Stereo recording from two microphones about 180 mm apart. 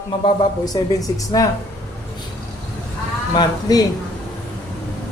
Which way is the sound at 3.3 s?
20° left (ahead or behind).